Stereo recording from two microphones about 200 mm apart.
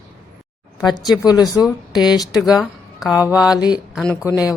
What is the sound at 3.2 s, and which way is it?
A woman's voice, 5° right (ahead or behind).